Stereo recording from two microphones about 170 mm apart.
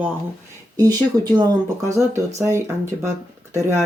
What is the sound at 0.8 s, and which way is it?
Speech, 25° right (ahead or behind).